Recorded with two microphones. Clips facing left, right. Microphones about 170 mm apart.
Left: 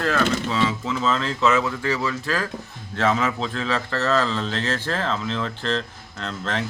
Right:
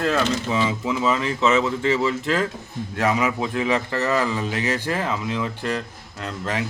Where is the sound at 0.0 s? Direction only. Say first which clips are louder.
Even; 15° right (ahead or behind).